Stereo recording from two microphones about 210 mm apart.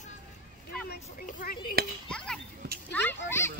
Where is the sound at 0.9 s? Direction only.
45° left (ahead or behind).